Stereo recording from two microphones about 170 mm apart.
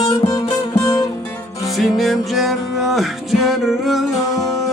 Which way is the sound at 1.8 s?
Centre (ahead or behind).